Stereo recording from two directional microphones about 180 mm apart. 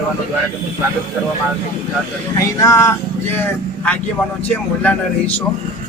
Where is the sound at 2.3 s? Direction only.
15° left (ahead or behind).